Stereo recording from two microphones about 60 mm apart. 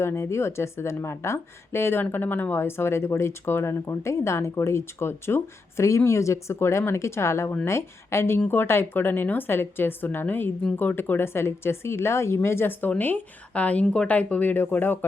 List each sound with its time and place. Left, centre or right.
0.0 s a woman's voice: left
13.5 s a woman's voice: left